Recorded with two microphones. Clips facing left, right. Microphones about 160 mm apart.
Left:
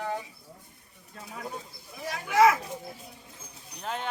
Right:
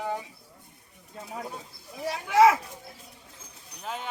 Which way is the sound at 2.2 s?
30° right (ahead or behind).